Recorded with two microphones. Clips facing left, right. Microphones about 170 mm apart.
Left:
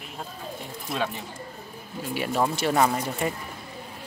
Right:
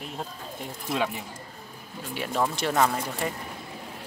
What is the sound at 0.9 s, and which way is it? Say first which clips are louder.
Speech: right 1 dB; 15° right (ahead or behind).